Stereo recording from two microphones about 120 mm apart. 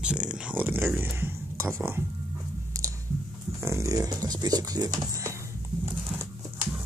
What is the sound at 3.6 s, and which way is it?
Speech, 25° right (ahead or behind).